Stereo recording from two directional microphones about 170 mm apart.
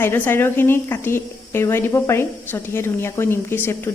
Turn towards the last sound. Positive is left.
turn(degrees=15)  # may be behind; listen again after turning